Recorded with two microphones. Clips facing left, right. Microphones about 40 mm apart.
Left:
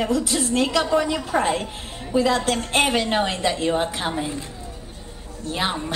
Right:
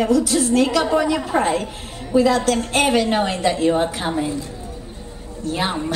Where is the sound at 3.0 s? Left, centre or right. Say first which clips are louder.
Right 3 dB; centre.